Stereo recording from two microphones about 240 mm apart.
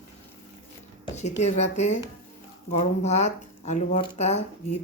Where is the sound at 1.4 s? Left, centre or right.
Left.